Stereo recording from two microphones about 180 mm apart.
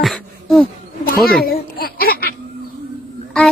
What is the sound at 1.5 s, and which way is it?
Speech, 55° left (ahead or behind).